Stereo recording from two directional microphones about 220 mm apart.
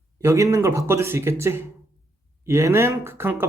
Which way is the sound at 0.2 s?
15° right (ahead or behind).